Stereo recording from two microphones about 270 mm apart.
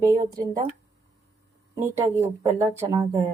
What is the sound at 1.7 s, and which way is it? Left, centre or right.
Speech, centre.